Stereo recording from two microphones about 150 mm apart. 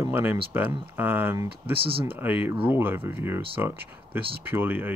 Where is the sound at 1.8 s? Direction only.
35° right (ahead or behind).